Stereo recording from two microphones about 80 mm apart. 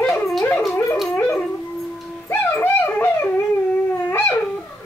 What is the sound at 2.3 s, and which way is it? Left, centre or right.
Dog, left.